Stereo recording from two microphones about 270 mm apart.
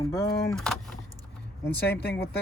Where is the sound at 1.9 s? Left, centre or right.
Left.